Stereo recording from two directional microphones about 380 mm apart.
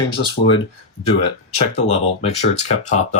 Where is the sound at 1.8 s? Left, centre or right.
Centre.